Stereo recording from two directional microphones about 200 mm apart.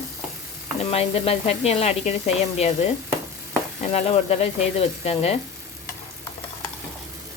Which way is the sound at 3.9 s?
30° left (ahead or behind).